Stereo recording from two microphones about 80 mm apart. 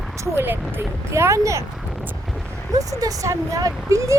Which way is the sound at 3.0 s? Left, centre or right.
Right.